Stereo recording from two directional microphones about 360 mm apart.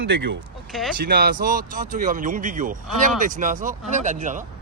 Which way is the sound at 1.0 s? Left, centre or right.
Right.